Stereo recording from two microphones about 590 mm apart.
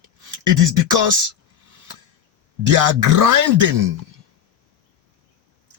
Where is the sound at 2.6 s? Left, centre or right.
Right.